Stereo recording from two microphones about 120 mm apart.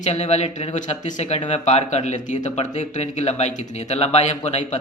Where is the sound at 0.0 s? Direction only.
65° left (ahead or behind).